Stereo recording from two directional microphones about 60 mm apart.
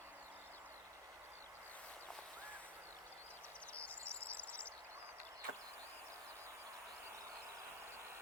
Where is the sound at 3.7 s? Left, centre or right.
Left.